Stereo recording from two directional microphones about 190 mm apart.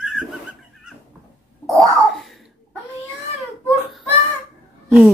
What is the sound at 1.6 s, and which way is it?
Cat, centre (ahead or behind).